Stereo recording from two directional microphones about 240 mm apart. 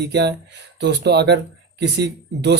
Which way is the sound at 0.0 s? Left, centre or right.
Right.